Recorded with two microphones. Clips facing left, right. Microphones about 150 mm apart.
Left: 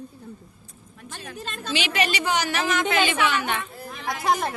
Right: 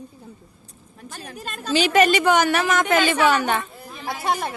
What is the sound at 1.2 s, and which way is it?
A woman's voice, 35° right (ahead or behind).